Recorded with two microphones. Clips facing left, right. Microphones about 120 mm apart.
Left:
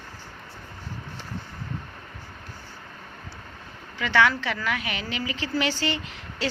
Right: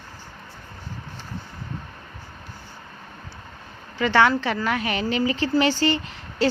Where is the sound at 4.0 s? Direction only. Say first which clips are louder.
Right 4 dB; 35° right (ahead or behind).